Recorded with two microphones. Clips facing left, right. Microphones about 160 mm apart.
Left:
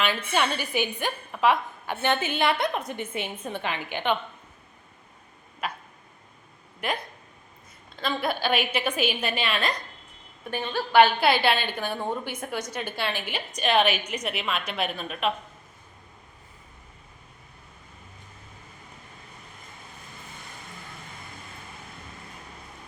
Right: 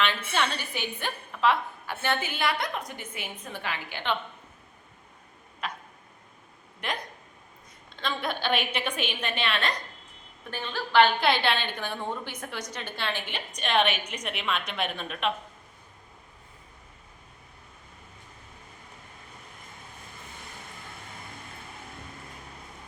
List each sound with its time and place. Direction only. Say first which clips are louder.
0.0 s a woman's voice: left 2 dB; 10° left (ahead or behind)
5.6 s tick-tock: left 3 dB; 5° left (ahead or behind)
6.8 s a woman's voice: left 4 dB; 5° left (ahead or behind)